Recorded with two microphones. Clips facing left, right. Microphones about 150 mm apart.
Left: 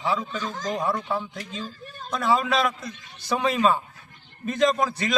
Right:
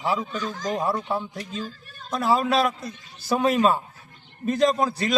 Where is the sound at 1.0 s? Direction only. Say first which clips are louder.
Right 1 dB; 30° right (ahead or behind).